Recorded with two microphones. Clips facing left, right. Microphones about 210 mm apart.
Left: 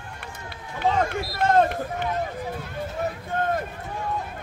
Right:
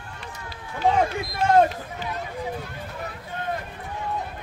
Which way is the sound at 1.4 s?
55° left (ahead or behind).